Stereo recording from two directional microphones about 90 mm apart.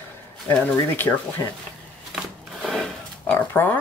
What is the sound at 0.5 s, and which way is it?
Speech, 20° left (ahead or behind).